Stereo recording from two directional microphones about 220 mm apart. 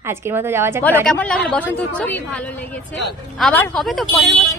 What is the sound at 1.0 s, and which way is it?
A woman's voice, 5° left (ahead or behind).